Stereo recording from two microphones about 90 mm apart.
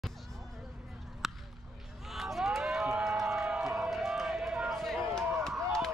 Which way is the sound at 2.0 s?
Centre (ahead or behind).